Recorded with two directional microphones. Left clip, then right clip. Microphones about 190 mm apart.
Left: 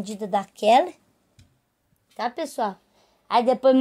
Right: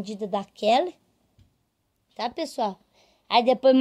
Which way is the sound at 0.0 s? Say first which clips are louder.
Left 3 dB; 5° right (ahead or behind).